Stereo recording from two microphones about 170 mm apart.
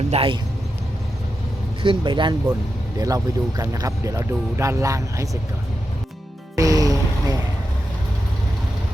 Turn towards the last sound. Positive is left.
turn(degrees=-20)  # may be behind; listen again after turning